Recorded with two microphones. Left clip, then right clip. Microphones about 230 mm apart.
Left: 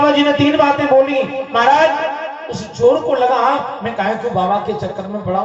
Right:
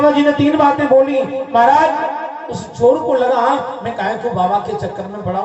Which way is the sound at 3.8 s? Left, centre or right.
Right.